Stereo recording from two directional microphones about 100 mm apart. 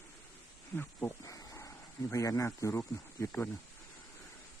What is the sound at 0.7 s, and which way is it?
Speech, 20° left (ahead or behind).